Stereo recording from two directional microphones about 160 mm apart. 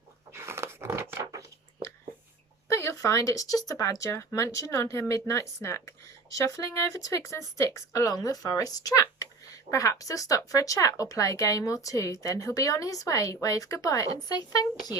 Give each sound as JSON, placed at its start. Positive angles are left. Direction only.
{"t": 0.3, "sound": "dog", "side_deg": -15}
{"t": 1.1, "sound": "a sound", "side_deg": -20}
{"t": 2.6, "sound": "speech", "side_deg": 20}